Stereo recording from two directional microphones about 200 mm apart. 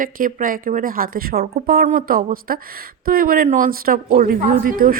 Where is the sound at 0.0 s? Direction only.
40° right (ahead or behind).